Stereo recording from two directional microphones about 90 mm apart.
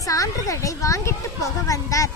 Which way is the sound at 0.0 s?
40° left (ahead or behind).